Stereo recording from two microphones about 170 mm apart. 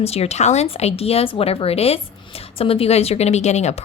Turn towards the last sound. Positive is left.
turn(degrees=40)  # may be behind; listen again after turning